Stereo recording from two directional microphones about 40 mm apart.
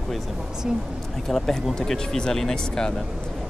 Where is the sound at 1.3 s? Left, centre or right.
Centre.